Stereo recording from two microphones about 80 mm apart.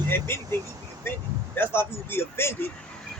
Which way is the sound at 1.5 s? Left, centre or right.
Left.